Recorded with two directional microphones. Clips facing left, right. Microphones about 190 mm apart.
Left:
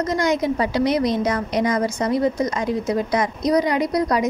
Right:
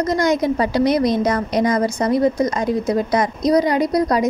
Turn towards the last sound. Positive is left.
turn(degrees=-35)  # may be behind; listen again after turning